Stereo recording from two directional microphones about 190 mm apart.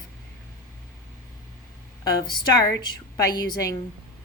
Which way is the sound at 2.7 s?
20° left (ahead or behind).